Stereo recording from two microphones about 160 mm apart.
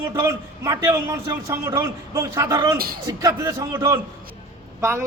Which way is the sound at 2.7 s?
70° right (ahead or behind).